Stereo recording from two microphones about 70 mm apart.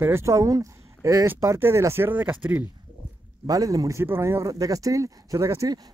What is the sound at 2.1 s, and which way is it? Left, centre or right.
Speech, right.